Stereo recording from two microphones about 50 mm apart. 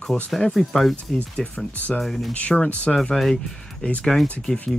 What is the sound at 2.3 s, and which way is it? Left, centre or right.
Speech, left.